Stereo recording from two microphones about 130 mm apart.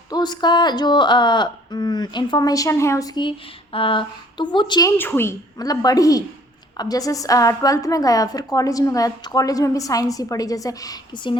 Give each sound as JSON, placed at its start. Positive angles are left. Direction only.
{"t": 0.1, "sound": "speech", "side_deg": 35}
{"t": 3.2, "sound": "speech", "side_deg": 40}
{"t": 4.9, "sound": "a woman's voice", "side_deg": 15}